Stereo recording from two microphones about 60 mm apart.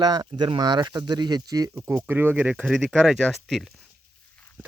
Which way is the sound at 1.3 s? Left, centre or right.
Right.